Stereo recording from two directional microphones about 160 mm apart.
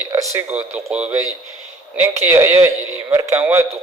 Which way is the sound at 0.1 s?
15° right (ahead or behind).